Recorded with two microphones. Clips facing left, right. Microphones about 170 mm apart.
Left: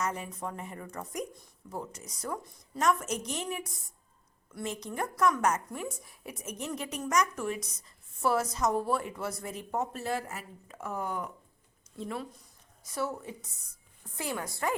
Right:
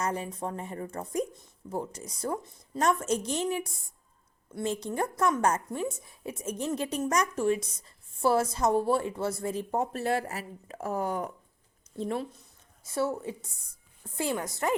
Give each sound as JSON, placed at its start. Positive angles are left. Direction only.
{"t": 0.0, "sound": "a woman's voice", "side_deg": -30}
{"t": 10.0, "sound": "speech", "side_deg": -65}
{"t": 10.8, "sound": "a woman's voice", "side_deg": -35}